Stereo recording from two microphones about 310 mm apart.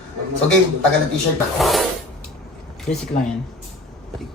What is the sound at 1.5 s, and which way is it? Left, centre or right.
Speech, centre.